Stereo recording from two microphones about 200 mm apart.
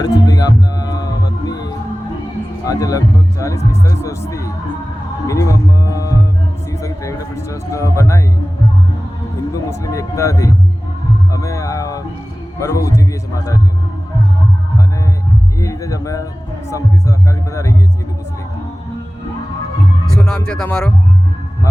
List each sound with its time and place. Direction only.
0.0 s music: 20° left (ahead or behind)
2.6 s speech: 15° left (ahead or behind)
5.2 s music: 15° left (ahead or behind)
6.7 s a man's voice: 15° left (ahead or behind)
9.5 s speech: 15° left (ahead or behind)
11.3 s music: 15° left (ahead or behind)
12.5 s speech: 15° left (ahead or behind)
15.5 s a sound: 15° left (ahead or behind)
16.6 s speech: 15° left (ahead or behind)
20.1 s speech: 5° left (ahead or behind)